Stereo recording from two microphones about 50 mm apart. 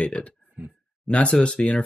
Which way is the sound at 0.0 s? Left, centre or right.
Left.